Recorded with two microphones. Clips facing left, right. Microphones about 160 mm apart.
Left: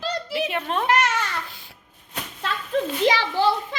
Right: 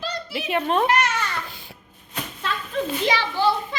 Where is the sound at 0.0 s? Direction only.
90° left.